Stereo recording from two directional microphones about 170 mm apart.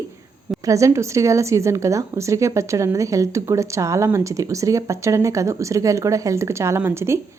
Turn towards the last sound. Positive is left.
turn(degrees=-15)  # may be behind; listen again after turning